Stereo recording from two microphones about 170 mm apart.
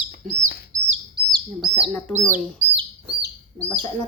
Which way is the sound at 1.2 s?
70° right (ahead or behind).